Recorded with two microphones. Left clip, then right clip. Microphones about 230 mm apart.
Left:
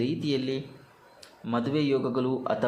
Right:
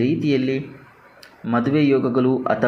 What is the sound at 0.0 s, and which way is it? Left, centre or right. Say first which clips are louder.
Speech: right 9 dB; centre.